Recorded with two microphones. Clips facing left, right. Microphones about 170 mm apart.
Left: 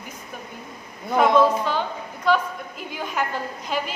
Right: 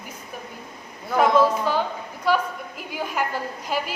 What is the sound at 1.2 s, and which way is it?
Speech, 10° right (ahead or behind).